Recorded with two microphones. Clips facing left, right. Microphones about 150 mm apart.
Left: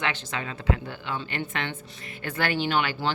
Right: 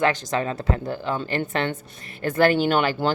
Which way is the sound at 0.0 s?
40° right (ahead or behind).